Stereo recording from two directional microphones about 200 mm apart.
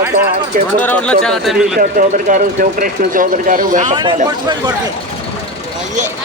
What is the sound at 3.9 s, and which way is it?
Speech, 25° right (ahead or behind).